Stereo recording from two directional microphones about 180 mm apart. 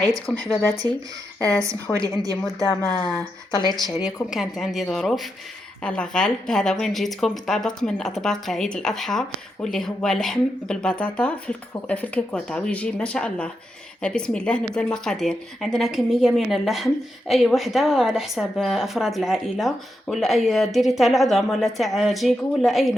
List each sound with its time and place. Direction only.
0.3 s speech: centre (ahead or behind)
0.8 s a woman's voice: 20° right (ahead or behind)
2.9 s speech: 5° left (ahead or behind)